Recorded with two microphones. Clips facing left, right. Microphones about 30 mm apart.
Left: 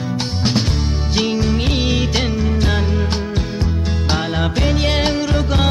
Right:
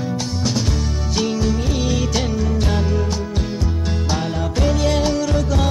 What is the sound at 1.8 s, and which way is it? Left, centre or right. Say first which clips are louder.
Music: left 2 dB; left.